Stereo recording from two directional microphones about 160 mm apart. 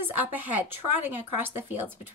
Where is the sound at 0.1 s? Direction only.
10° right (ahead or behind).